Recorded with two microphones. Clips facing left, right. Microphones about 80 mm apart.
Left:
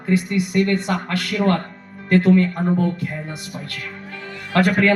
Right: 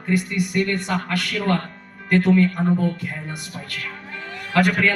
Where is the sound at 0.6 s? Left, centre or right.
Left.